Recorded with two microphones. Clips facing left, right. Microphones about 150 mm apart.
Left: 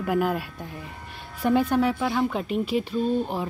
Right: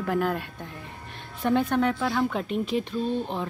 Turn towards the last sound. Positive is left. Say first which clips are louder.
# left 3 dB
turn(degrees=5)  # may be behind; listen again after turning